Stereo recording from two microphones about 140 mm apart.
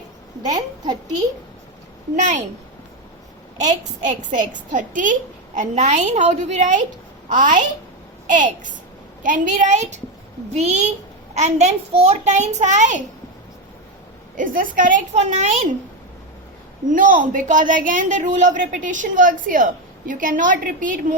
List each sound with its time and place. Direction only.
3.6 s a child's voice: 60° right (ahead or behind)
14.3 s a man's voice: 75° right (ahead or behind)
15.1 s a child's voice: 55° right (ahead or behind)
16.9 s a man's voice: 70° right (ahead or behind)